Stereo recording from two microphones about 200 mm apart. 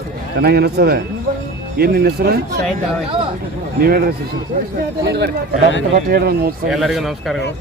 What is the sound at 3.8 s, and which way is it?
Speech, 50° right (ahead or behind).